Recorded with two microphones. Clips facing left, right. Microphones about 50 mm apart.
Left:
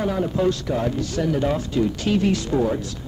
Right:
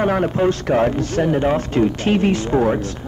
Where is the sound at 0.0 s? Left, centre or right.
Right.